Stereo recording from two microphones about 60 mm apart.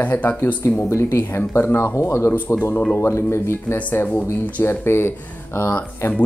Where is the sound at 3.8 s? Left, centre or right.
Left.